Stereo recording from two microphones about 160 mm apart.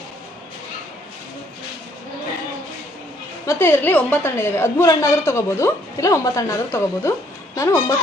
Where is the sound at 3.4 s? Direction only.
15° left (ahead or behind).